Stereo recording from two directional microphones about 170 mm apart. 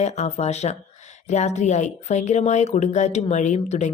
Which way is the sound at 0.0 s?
40° left (ahead or behind).